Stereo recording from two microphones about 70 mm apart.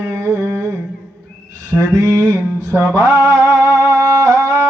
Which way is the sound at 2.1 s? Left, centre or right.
Right.